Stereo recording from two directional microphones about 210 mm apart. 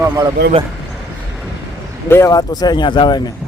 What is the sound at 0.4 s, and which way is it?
Speech, 50° right (ahead or behind).